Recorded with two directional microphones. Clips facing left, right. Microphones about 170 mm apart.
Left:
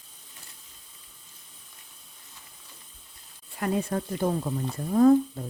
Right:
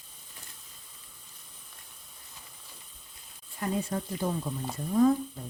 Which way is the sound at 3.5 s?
65° left (ahead or behind).